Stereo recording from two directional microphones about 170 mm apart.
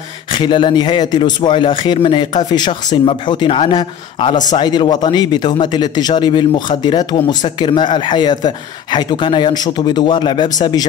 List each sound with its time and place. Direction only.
0.3 s speech: 30° left (ahead or behind)